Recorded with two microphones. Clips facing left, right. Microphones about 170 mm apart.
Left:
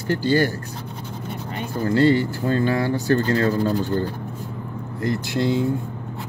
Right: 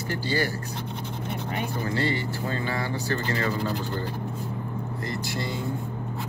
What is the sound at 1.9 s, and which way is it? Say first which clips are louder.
Speech: left 13 dB; 50° left (ahead or behind).